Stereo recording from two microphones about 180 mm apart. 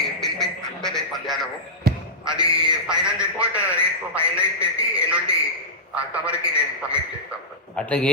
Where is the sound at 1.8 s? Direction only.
60° right (ahead or behind).